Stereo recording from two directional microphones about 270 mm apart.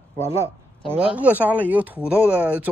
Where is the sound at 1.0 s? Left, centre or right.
Centre.